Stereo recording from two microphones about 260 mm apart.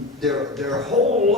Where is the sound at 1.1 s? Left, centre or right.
Right.